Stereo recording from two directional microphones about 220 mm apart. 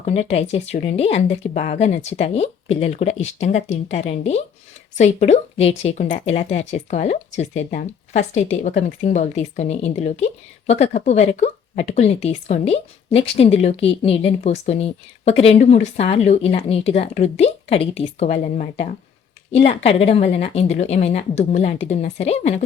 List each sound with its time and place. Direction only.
0.0 s speech: 30° left (ahead or behind)